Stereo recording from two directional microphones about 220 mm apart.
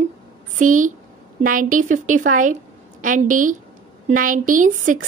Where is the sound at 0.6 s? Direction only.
35° right (ahead or behind).